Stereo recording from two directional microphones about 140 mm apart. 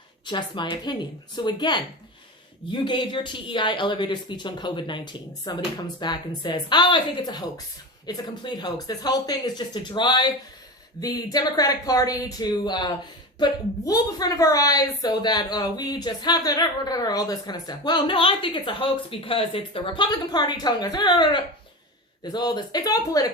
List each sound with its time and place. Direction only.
0.3 s speech: 35° left (ahead or behind)
2.8 s a woman's voice: 35° left (ahead or behind)